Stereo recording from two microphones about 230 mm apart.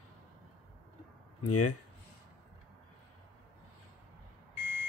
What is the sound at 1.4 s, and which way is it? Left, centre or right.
Speech, left.